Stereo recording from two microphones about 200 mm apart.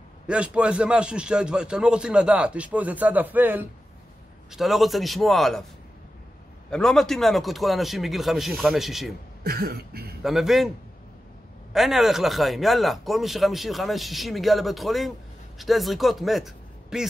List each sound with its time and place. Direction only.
0.3 s speech: 5° right (ahead or behind)
6.7 s speech: 5° left (ahead or behind)
9.4 s cough: 50° right (ahead or behind)
10.2 s speech: centre (ahead or behind)
11.7 s a man's voice: centre (ahead or behind)